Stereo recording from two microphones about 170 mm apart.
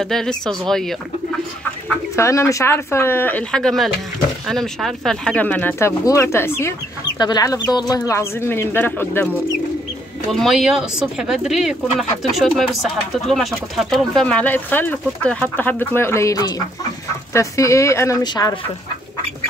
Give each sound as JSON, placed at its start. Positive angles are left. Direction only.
{"t": 0.0, "sound": "speech", "side_deg": 5}
{"t": 2.1, "sound": "speech", "side_deg": 15}
{"t": 10.3, "sound": "speech", "side_deg": 0}